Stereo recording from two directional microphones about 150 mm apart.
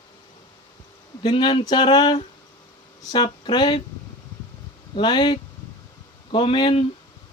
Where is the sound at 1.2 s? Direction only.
35° left (ahead or behind).